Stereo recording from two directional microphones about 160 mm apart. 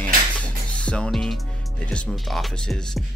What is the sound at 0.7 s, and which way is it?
Speech, 5° left (ahead or behind).